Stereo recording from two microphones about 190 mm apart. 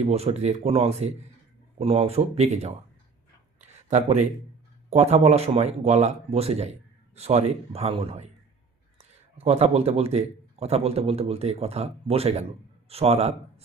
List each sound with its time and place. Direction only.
0.0 s a man's voice: 35° right (ahead or behind)
3.8 s a man's voice: 35° right (ahead or behind)